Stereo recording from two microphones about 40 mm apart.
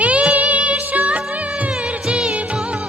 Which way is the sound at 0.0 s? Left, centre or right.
Right.